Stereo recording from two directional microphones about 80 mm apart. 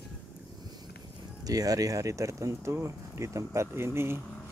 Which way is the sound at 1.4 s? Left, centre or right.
Right.